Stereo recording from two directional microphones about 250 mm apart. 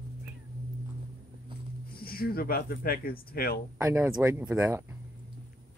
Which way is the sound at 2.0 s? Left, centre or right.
Left.